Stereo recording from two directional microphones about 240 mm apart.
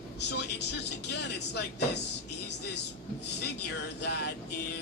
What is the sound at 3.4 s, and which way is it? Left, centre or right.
Speech, left.